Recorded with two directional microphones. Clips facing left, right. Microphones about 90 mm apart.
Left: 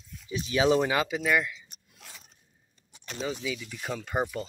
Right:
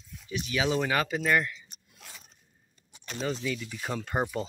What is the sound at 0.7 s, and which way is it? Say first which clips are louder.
Speech: left 2 dB; 15° left (ahead or behind).